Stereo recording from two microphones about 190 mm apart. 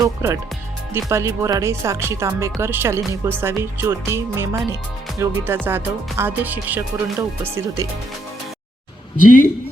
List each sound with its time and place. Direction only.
0.0 s speech: 15° right (ahead or behind)
9.2 s speech: 45° left (ahead or behind)